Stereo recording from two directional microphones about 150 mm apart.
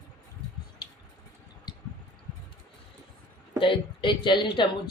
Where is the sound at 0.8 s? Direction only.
30° left (ahead or behind).